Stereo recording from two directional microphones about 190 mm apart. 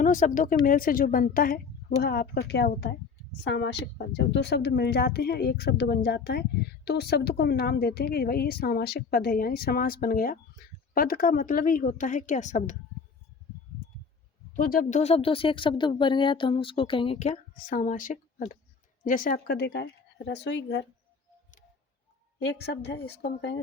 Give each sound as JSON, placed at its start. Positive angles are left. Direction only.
{"t": 0.0, "sound": "a woman's voice", "side_deg": 40}
{"t": 3.4, "sound": "a woman's voice", "side_deg": 70}
{"t": 14.5, "sound": "a woman's voice", "side_deg": 45}
{"t": 22.4, "sound": "a woman's voice", "side_deg": 65}